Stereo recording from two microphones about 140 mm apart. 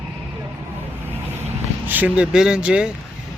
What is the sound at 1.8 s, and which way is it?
Speech, 10° right (ahead or behind).